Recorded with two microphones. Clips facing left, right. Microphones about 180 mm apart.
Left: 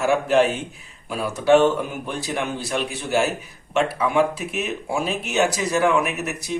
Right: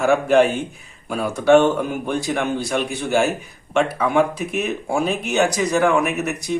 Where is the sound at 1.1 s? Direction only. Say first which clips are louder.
Right 3 dB; 50° right (ahead or behind).